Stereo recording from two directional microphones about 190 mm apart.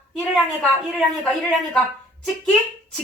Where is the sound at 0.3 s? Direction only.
5° left (ahead or behind).